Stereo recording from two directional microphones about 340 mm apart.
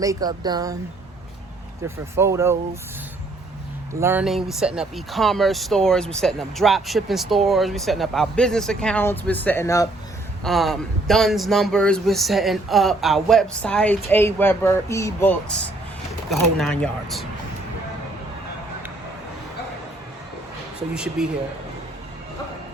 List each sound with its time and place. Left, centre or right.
0.0 s speech: centre
2.1 s speech: centre
4.0 s speech: centre
20.9 s speech: centre